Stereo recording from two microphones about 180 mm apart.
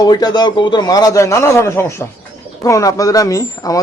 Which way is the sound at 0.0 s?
20° left (ahead or behind).